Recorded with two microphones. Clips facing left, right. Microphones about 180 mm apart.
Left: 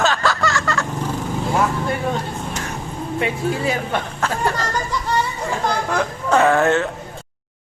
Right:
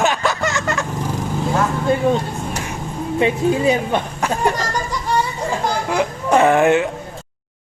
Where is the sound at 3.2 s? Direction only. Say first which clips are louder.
Right 6 dB; 20° right (ahead or behind).